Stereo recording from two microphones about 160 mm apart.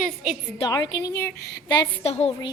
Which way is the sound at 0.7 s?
25° left (ahead or behind).